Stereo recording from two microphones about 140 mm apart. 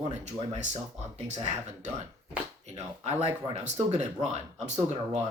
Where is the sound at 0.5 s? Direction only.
55° right (ahead or behind).